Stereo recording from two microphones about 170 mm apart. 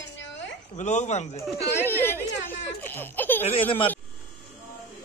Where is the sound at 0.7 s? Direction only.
45° left (ahead or behind).